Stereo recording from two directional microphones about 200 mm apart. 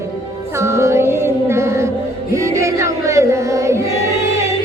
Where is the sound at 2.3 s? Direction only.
15° right (ahead or behind).